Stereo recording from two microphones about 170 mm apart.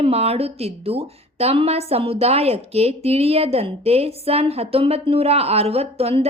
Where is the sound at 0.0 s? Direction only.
35° right (ahead or behind).